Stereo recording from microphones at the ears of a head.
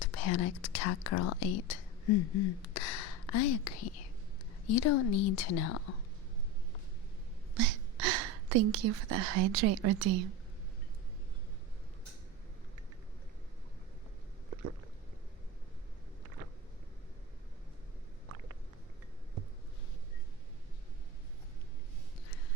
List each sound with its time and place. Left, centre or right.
0.0 s a woman's voice: left
7.5 s speech: right